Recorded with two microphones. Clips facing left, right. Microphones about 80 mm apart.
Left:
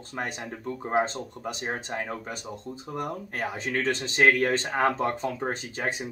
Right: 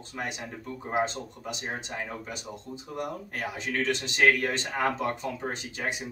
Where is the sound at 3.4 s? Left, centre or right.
Left.